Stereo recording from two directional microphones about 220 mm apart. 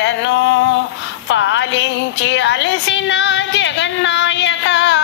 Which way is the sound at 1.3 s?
55° left (ahead or behind).